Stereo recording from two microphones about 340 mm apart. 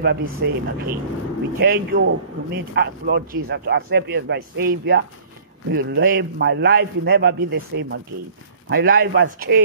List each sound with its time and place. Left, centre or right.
0.0 s a man's voice: right